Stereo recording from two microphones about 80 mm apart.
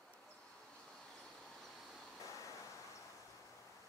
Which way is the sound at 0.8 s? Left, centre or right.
Centre.